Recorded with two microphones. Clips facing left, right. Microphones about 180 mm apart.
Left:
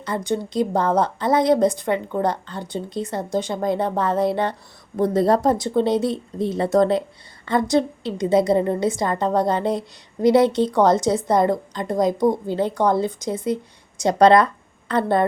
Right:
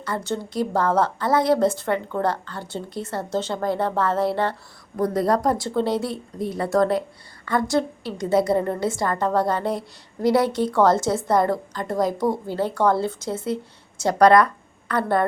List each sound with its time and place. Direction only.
0.0 s a woman's voice: 15° left (ahead or behind)